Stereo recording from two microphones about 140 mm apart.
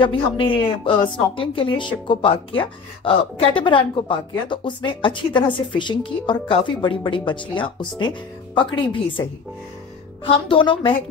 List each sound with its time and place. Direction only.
0.0 s a woman's voice: 35° left (ahead or behind)